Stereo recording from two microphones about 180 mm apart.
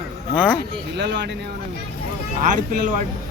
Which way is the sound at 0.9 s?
75° right (ahead or behind).